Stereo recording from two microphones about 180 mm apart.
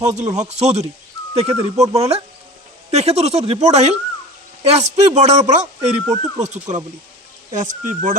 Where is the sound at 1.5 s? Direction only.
15° right (ahead or behind).